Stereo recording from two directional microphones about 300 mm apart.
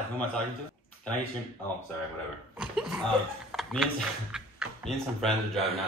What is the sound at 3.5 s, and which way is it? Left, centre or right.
Speech, centre.